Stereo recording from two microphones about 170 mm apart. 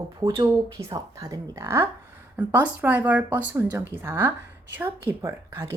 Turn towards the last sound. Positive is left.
turn(degrees=-15)  # may be behind; listen again after turning